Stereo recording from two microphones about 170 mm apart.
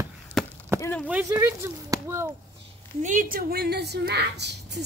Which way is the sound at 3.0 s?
50° right (ahead or behind).